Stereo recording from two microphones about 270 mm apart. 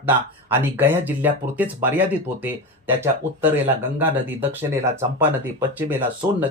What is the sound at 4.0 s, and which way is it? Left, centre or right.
Speech, centre.